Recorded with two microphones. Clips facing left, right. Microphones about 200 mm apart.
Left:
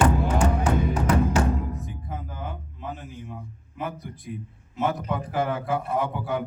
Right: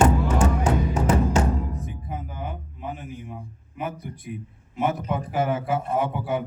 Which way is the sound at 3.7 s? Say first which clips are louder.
Right 1 dB; 20° right (ahead or behind).